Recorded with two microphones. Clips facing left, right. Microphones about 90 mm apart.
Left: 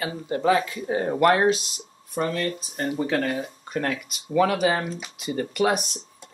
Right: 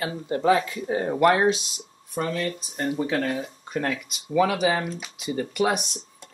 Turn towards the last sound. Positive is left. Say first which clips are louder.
# left 1 dB
turn(degrees=0)  # may be behind; listen again after turning